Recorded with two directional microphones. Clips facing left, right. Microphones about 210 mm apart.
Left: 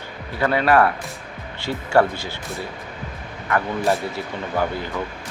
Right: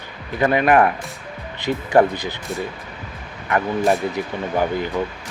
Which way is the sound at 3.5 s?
15° right (ahead or behind).